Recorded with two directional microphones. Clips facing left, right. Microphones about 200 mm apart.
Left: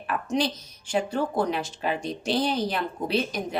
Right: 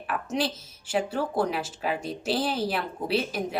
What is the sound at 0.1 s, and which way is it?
Speech, 5° right (ahead or behind).